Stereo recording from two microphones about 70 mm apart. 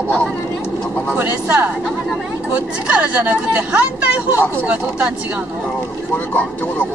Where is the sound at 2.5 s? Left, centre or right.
Centre.